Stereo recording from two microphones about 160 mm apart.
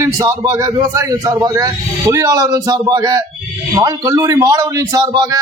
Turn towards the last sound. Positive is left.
turn(degrees=-25)  # may be behind; listen again after turning